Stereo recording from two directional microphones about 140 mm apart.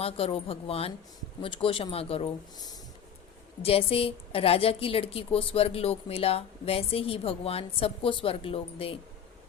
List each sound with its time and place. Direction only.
0.0 s a woman's voice: 45° left (ahead or behind)
3.6 s a woman's voice: 45° left (ahead or behind)